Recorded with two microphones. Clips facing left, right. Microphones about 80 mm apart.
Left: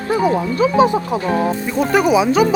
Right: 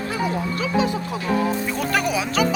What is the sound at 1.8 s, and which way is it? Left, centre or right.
Speech, left.